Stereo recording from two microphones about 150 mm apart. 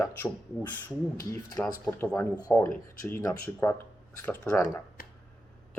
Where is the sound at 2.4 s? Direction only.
25° left (ahead or behind).